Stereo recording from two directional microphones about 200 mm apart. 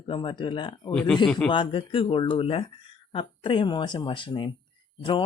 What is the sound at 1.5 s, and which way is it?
Speech, 25° left (ahead or behind).